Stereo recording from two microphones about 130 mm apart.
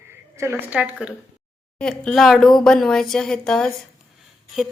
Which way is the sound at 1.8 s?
5° left (ahead or behind).